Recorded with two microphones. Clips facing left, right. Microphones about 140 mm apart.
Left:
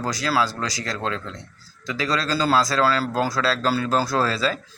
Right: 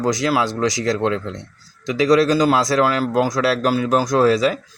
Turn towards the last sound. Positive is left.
turn(degrees=-15)  # may be behind; listen again after turning